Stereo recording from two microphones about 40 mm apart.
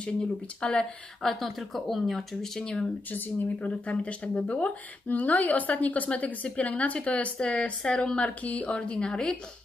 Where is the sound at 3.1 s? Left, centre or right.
Left.